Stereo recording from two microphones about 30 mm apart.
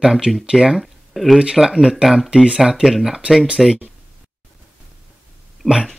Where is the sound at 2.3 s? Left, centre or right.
Right.